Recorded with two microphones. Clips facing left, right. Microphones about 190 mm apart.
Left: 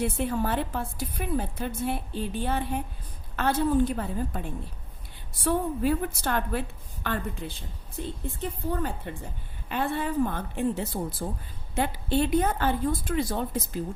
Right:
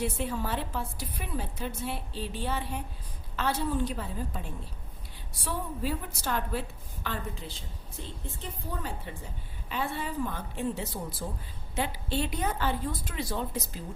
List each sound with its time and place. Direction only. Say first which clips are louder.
0.0 s a woman's voice: left 4 dB; 55° left (ahead or behind)
5.5 s a woman's voice: left 8 dB; 55° left (ahead or behind)